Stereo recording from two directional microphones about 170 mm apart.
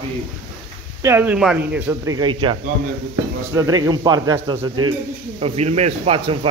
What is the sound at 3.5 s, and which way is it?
Speech, 20° right (ahead or behind).